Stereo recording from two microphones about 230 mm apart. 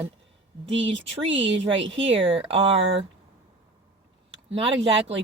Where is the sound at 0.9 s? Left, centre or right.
Right.